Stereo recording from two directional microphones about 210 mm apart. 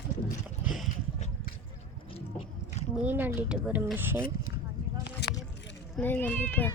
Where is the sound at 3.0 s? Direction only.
10° right (ahead or behind).